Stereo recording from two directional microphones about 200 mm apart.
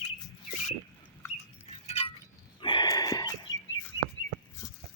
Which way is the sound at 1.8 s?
35° left (ahead or behind).